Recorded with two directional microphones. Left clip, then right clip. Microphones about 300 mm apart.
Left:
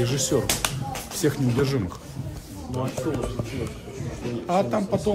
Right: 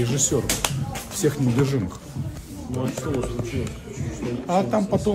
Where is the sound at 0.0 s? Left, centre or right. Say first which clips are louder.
Even; centre.